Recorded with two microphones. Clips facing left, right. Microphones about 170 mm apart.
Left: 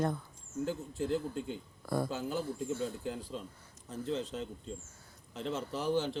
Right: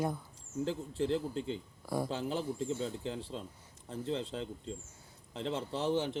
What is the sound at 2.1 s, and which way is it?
Speech, 30° right (ahead or behind).